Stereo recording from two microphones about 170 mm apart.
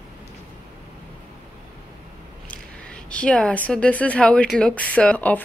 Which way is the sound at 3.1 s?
5° left (ahead or behind).